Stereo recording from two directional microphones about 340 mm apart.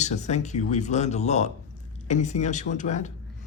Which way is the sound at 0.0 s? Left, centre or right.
Centre.